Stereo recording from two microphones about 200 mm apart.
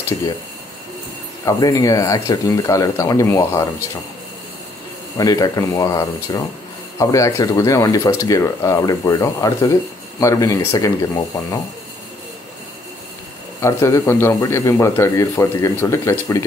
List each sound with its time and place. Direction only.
1.4 s speech: 15° left (ahead or behind)
5.1 s speech: 20° left (ahead or behind)
13.6 s speech: 15° left (ahead or behind)